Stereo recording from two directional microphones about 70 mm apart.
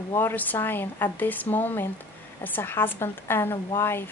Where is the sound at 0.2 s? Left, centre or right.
Left.